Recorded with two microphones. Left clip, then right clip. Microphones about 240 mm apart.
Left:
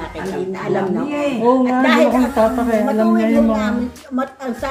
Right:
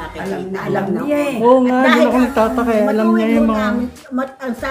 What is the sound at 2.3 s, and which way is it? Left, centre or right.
Speech, right.